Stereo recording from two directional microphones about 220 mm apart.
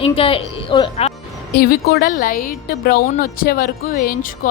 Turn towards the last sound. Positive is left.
turn(degrees=40)  # may be behind; listen again after turning